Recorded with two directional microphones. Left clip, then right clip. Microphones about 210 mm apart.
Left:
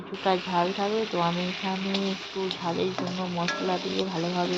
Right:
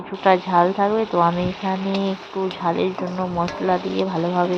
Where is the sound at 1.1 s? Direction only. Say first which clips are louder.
Right 9 dB; 5° right (ahead or behind).